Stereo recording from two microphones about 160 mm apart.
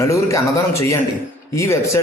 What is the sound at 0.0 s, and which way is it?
A man's voice, 20° left (ahead or behind).